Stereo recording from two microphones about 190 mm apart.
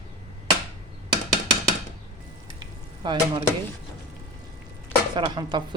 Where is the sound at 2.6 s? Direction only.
25° right (ahead or behind).